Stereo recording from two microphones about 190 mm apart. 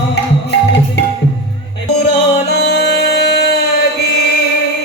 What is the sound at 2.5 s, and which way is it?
Music, 60° left (ahead or behind).